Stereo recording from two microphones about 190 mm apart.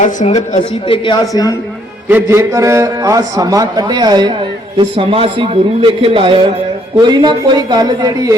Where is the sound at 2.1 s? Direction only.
10° right (ahead or behind).